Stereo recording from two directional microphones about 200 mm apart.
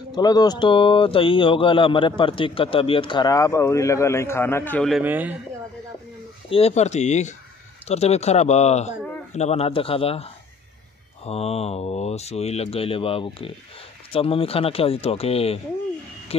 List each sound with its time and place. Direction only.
0.1 s speech: 20° left (ahead or behind); by 5.0 s 5° left (ahead or behind)
5.0 s speech: 10° right (ahead or behind)
6.5 s speech: 30° left (ahead or behind)